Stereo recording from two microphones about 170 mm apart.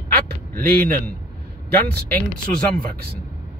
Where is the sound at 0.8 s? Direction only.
10° left (ahead or behind).